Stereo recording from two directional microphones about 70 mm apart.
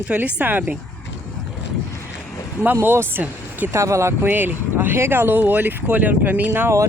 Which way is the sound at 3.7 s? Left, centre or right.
Right.